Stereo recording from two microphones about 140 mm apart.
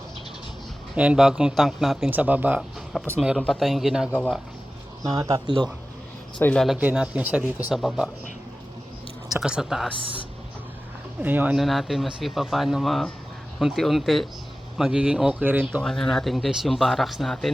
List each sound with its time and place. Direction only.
0.9 s speech: 5° right (ahead or behind)
2.0 s speech: 10° right (ahead or behind)
2.6 s speech: centre (ahead or behind)
5.1 s speech: 25° right (ahead or behind)
6.4 s speech: 10° left (ahead or behind)
6.7 s speech: 10° right (ahead or behind)
9.3 s speech: 5° right (ahead or behind)
11.2 s speech: 10° right (ahead or behind)
11.5 s speech: centre (ahead or behind)
15.8 s speech: 5° left (ahead or behind)